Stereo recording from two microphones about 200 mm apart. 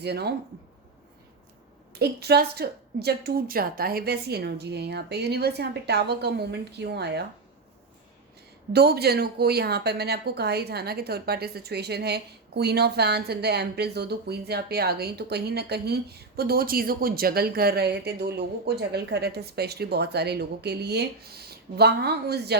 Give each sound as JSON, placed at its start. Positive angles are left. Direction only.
{"t": 0.0, "sound": "a woman's voice", "side_deg": -55}
{"t": 1.9, "sound": "a woman's voice", "side_deg": -55}
{"t": 8.7, "sound": "a woman's voice", "side_deg": -55}